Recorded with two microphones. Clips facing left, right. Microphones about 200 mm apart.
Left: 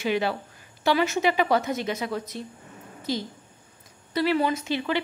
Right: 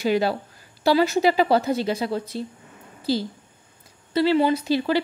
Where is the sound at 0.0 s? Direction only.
35° right (ahead or behind).